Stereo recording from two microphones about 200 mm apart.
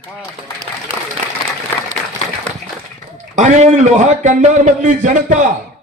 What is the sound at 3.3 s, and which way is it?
A man's voice, 35° right (ahead or behind).